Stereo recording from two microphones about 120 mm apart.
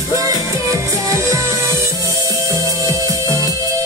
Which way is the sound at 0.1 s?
30° right (ahead or behind).